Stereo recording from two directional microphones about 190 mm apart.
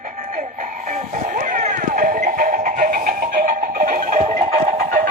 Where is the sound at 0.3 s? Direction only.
40° right (ahead or behind).